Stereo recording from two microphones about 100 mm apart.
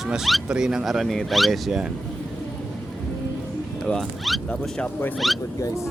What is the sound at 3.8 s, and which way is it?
Speech, 5° left (ahead or behind).